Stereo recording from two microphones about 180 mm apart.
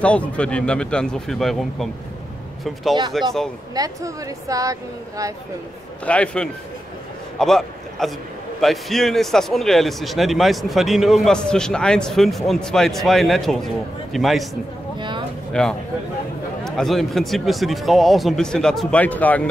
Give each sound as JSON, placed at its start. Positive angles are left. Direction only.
{"t": 0.0, "sound": "speech", "side_deg": 5}
{"t": 3.7, "sound": "speech", "side_deg": -20}
{"t": 6.0, "sound": "a man's voice", "side_deg": 5}
{"t": 15.0, "sound": "a sound", "side_deg": -25}
{"t": 15.5, "sound": "speech", "side_deg": 5}